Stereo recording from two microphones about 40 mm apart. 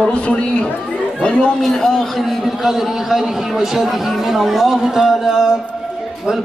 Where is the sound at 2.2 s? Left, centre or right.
Centre.